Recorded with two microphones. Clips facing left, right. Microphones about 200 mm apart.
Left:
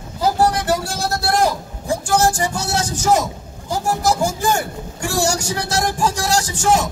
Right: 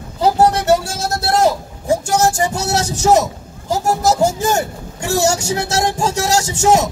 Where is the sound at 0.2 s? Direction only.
25° right (ahead or behind).